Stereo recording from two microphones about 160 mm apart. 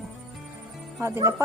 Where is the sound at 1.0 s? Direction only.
20° right (ahead or behind).